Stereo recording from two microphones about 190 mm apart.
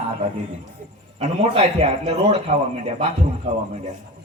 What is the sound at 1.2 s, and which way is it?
A man's voice, 35° right (ahead or behind).